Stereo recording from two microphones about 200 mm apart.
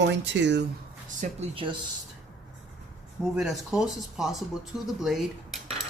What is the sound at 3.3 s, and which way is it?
Speech, centre (ahead or behind).